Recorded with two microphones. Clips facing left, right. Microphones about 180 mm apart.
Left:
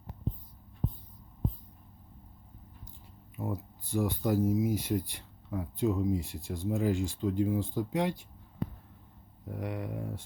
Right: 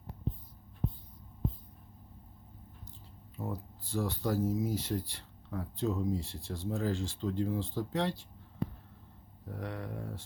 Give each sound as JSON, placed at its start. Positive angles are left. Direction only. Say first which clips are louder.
{"t": 3.3, "sound": "speech", "louder": "left 3 dB", "side_deg": 15}
{"t": 9.5, "sound": "speech", "louder": "left 3 dB", "side_deg": 15}